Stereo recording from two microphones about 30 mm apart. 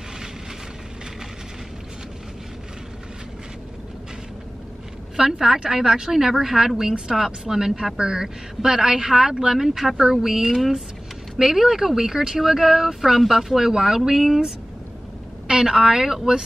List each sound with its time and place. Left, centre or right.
5.1 s a woman's voice: centre
9.6 s speech: centre
15.4 s a sound: right
15.7 s speech: centre